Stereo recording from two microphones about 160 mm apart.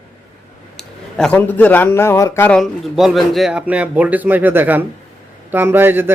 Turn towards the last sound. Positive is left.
turn(degrees=-15)  # may be behind; listen again after turning